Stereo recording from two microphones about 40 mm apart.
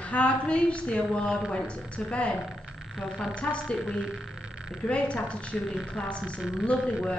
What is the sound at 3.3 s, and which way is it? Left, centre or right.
Speech, left.